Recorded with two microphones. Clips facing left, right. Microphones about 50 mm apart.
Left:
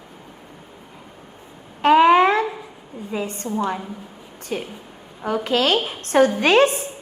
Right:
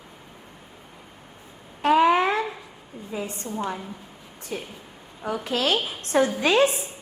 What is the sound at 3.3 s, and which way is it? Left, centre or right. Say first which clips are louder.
Speech: left 6 dB; left.